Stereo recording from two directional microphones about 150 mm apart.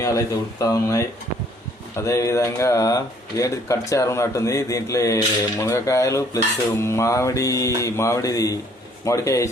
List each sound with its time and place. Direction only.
0.0 s speech: 20° left (ahead or behind)